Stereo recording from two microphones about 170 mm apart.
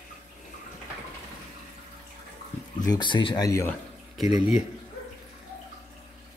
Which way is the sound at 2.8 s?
25° left (ahead or behind).